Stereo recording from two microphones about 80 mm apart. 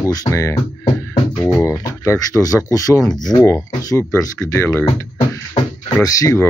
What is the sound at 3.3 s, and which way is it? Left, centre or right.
Speech, centre.